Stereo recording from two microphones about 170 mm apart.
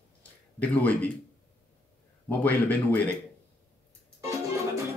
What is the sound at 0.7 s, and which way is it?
Speech, 10° left (ahead or behind).